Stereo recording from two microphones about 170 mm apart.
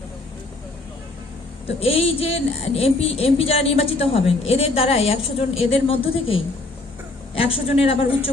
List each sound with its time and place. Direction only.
1.6 s a woman's voice: 35° left (ahead or behind)